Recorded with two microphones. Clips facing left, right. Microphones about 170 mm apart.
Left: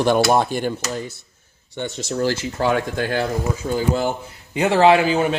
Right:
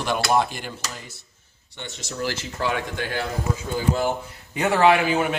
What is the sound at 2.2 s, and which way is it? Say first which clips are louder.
Speech: left 6 dB; 45° left (ahead or behind).